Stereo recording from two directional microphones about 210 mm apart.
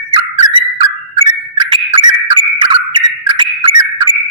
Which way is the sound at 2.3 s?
25° right (ahead or behind).